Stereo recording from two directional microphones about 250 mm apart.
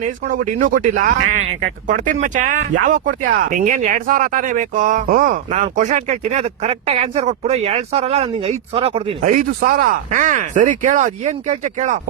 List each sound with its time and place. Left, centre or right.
0.6 s speech: right
9.6 s speech: right